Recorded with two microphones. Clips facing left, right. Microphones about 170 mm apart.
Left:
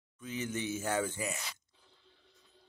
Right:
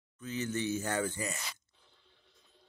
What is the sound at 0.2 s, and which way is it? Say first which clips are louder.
Speech: right 2 dB; 10° left (ahead or behind).